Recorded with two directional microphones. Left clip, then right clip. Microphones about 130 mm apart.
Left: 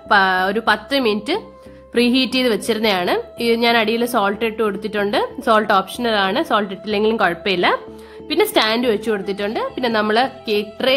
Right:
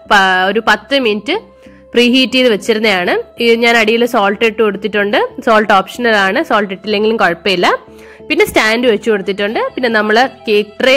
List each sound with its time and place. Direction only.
0.1 s a woman's voice: 25° right (ahead or behind)